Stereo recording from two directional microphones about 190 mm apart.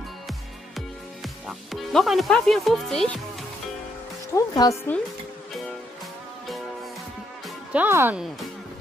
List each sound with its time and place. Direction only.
0.3 s music: centre (ahead or behind)
4.4 s speech: 15° left (ahead or behind)
7.4 s speech: 10° right (ahead or behind)